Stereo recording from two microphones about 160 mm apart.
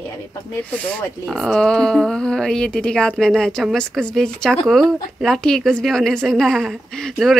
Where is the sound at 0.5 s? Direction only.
10° left (ahead or behind).